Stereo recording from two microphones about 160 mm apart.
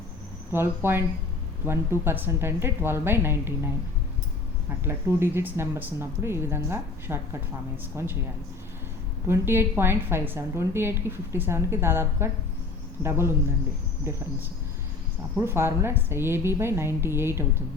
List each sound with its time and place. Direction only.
0.5 s a woman's voice: 15° right (ahead or behind)
4.8 s a woman's voice: 15° right (ahead or behind)
9.2 s a woman's voice: 15° right (ahead or behind)
15.4 s a woman's voice: 15° right (ahead or behind)